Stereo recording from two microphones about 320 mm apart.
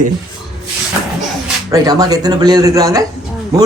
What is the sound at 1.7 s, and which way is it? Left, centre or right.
Speech, centre.